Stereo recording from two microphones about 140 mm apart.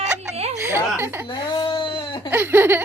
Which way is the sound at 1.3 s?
30° left (ahead or behind).